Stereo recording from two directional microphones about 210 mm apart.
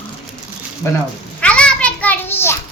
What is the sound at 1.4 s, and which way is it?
Children playing, 5° left (ahead or behind).